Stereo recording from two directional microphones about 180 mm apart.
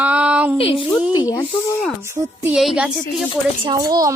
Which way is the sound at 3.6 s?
20° right (ahead or behind).